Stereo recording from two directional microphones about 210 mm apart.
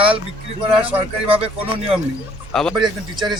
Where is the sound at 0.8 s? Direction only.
10° right (ahead or behind).